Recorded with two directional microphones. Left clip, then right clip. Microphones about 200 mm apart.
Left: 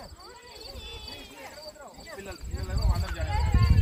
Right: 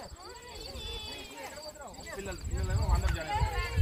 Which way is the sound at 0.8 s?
30° right (ahead or behind).